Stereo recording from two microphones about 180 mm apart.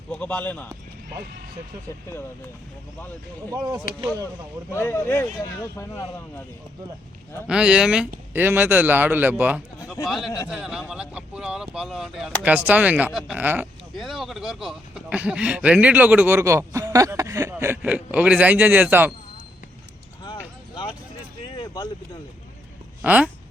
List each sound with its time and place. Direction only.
0.1 s a man's voice: 5° left (ahead or behind)
3.5 s speech: 20° right (ahead or behind)
4.7 s a man's voice: 15° left (ahead or behind)
7.4 s a man's voice: 5° right (ahead or behind)
21.4 s vehicle: 25° left (ahead or behind)
23.0 s a man's voice: 5° right (ahead or behind)